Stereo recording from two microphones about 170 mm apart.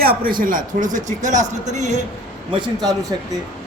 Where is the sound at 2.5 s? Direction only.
25° right (ahead or behind).